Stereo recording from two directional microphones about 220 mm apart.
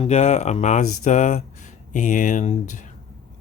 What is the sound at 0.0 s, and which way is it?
Speech, 30° left (ahead or behind).